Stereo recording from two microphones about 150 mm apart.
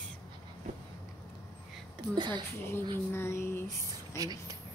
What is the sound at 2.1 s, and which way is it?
Speech, 30° right (ahead or behind).